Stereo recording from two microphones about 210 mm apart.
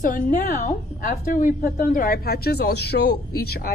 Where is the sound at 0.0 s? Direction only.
35° left (ahead or behind).